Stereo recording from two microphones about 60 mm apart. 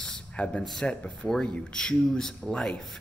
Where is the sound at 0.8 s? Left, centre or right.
Centre.